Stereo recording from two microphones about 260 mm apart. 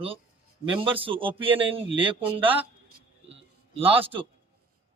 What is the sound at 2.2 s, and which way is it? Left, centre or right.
Speech, centre.